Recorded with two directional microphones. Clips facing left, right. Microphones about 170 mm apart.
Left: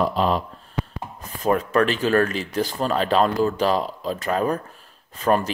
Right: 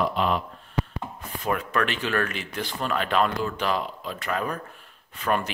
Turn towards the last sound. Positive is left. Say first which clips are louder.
# left 6 dB
turn(degrees=35)  # may be behind; listen again after turning